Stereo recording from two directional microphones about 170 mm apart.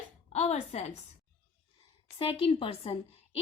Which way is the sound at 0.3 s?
40° left (ahead or behind).